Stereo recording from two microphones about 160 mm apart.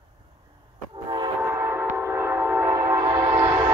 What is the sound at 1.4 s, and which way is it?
Train, 15° right (ahead or behind).